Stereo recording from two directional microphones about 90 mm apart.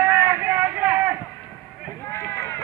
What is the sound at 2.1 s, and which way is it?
Run, 25° left (ahead or behind).